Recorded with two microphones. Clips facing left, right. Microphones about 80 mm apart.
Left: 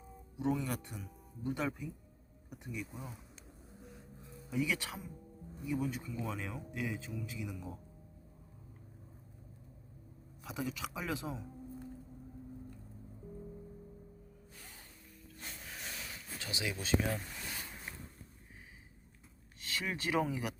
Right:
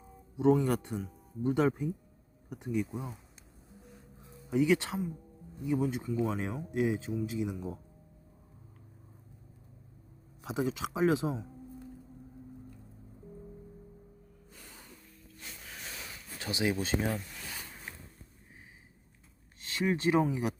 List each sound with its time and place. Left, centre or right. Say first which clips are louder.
0.6 s speech: right 9 dB; right
2.5 s speech: right 11 dB; right
2.9 s speech: right 7 dB; centre
4.5 s speech: right 9 dB; right
10.4 s speech: right 7 dB; right
16.5 s speech: right 5 dB; right
19.6 s speech: right 9 dB; right